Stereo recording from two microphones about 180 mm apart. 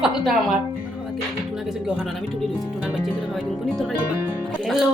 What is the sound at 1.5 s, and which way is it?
A woman's voice, 5° right (ahead or behind).